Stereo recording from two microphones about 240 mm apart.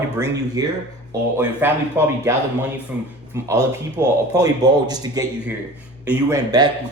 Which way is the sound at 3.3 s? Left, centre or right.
Centre.